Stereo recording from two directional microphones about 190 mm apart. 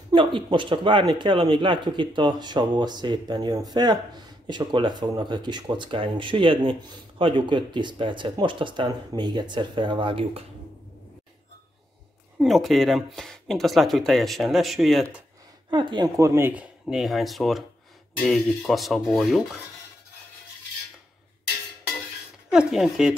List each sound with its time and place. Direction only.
0.1 s speech: 25° right (ahead or behind)
12.4 s speech: centre (ahead or behind)
15.7 s speech: 25° right (ahead or behind)
16.8 s speech: centre (ahead or behind)
22.5 s speech: 5° right (ahead or behind)